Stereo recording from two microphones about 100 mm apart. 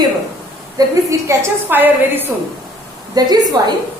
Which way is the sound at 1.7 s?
20° right (ahead or behind).